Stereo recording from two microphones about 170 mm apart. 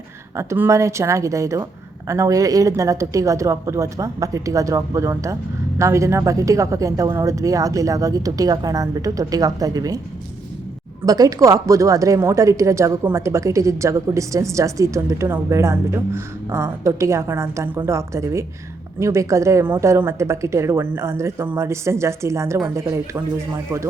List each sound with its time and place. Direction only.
0.3 s a woman's voice: 15° right (ahead or behind)
11.0 s a woman's voice: 20° right (ahead or behind)